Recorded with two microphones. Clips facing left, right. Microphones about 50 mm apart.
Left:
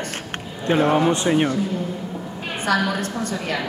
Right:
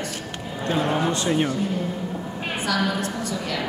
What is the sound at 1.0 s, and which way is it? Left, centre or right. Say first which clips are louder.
Speech: left 4 dB; left.